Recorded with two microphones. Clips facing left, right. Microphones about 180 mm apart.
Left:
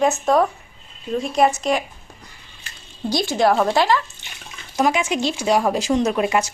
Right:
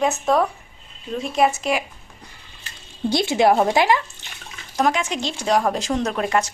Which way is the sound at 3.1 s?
20° right (ahead or behind).